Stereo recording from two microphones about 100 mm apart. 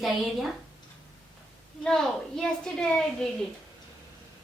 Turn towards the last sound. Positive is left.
turn(degrees=5)  # may be behind; listen again after turning